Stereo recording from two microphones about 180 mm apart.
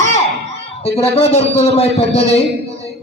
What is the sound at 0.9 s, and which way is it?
A man's voice, 35° left (ahead or behind).